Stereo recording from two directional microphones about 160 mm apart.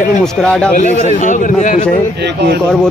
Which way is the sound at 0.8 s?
50° left (ahead or behind).